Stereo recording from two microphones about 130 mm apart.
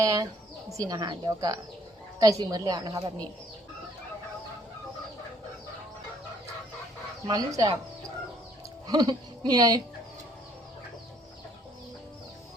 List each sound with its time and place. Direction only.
0.0 s a woman's voice: 25° right (ahead or behind)
7.3 s a woman's voice: 30° right (ahead or behind)
8.9 s speech: 30° right (ahead or behind)